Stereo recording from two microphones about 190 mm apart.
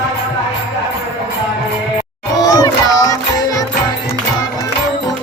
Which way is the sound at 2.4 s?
20° left (ahead or behind).